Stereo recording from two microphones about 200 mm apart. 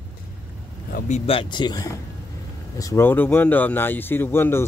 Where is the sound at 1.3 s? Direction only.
25° left (ahead or behind).